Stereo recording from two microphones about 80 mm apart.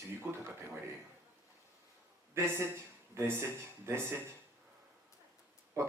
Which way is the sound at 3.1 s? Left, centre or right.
Right.